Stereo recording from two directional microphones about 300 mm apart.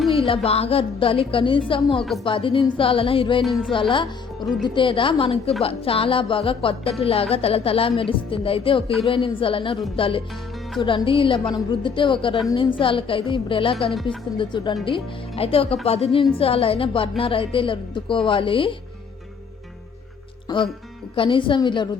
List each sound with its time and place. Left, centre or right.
0.4 s a woman's voice: centre
3.4 s music: centre
3.7 s a woman's voice: centre
13.9 s music: centre
14.3 s a woman's voice: centre
20.5 s a woman's voice: centre